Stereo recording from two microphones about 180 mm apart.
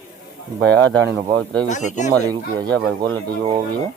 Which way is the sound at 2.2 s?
20° right (ahead or behind).